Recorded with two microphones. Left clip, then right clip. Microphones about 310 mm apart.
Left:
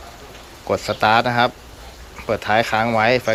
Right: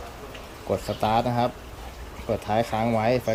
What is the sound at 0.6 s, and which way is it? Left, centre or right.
Speech, left.